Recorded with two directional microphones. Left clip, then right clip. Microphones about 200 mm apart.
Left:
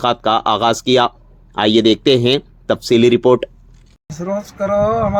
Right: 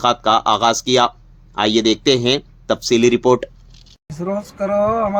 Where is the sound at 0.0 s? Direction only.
20° left (ahead or behind).